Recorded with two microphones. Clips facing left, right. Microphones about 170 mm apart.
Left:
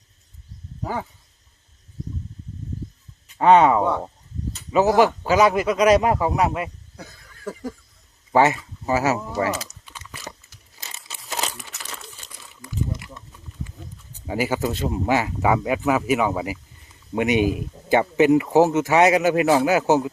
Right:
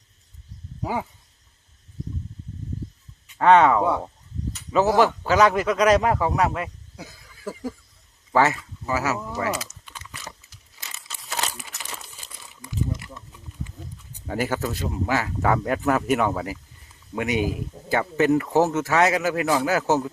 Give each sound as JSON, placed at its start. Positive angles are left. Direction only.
{"t": 0.8, "sound": "a sound", "side_deg": -10}
{"t": 3.3, "sound": "speech", "side_deg": 15}
{"t": 6.9, "sound": "cough", "side_deg": -5}
{"t": 8.3, "sound": "speech", "side_deg": 20}
{"t": 11.4, "sound": "crumpling", "side_deg": -5}
{"t": 14.3, "sound": "speech", "side_deg": 10}
{"t": 14.7, "sound": "speech", "side_deg": 25}
{"t": 17.2, "sound": "speech", "side_deg": 20}